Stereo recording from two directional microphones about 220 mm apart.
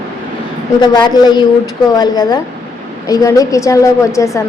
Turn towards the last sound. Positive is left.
turn(degrees=15)  # may be behind; listen again after turning